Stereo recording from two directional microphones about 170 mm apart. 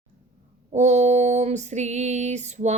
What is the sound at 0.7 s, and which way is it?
Female singing, 45° right (ahead or behind).